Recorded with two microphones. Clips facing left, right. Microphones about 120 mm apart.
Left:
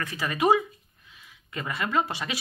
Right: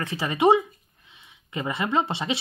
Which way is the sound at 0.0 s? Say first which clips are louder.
Right 4 dB; 25° right (ahead or behind).